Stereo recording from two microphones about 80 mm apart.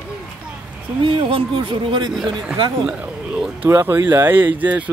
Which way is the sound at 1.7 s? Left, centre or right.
Right.